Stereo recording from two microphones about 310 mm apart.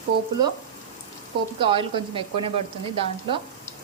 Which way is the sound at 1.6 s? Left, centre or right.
Centre.